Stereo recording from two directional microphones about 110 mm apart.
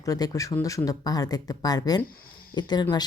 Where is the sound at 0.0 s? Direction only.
30° left (ahead or behind).